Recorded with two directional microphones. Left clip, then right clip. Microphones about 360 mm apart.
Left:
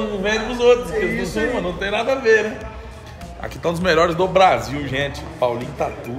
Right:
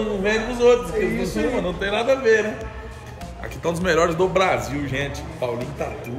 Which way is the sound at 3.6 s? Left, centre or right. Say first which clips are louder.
Left 3 dB; centre.